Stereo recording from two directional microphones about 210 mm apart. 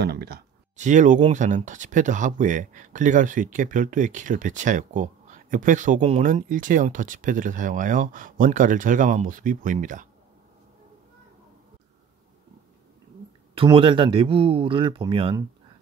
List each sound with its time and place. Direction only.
0.0 s speech: 50° right (ahead or behind)
0.7 s speech: 35° right (ahead or behind)
13.6 s speech: 25° right (ahead or behind)